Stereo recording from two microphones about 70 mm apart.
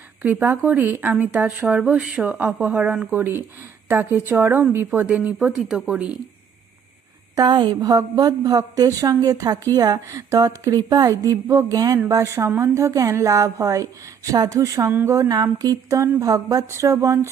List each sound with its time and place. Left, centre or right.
0.2 s speech: right
5.5 s speech: centre
7.3 s a woman's voice: right
12.5 s a woman's voice: right
15.5 s a woman's voice: right
16.6 s a woman's voice: right